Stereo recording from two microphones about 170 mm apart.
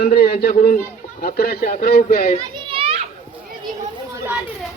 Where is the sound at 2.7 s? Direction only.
30° right (ahead or behind).